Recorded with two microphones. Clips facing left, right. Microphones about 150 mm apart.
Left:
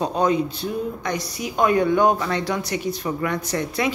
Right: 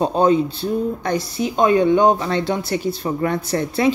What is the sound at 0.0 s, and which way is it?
A woman's voice, 30° right (ahead or behind).